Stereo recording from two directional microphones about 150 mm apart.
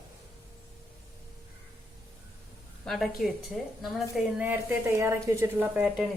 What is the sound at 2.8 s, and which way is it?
Speech, centre (ahead or behind).